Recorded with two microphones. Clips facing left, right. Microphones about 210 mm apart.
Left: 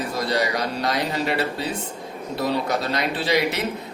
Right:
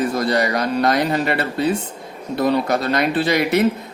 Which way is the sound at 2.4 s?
55° right (ahead or behind).